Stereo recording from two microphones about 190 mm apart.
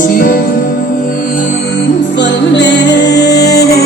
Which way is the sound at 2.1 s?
70° left (ahead or behind).